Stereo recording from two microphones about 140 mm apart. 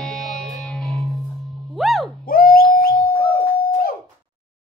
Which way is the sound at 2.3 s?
90° left.